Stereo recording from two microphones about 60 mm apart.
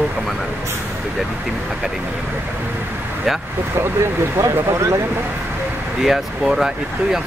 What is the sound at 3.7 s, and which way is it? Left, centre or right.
Speech, right.